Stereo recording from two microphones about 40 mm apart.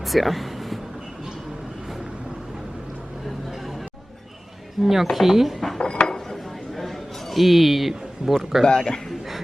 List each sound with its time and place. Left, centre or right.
0.0 s a sound: centre
4.8 s speech: centre
5.5 s dishes: centre
5.8 s dishes: left
6.1 s a sound: centre
8.6 s a man's voice: left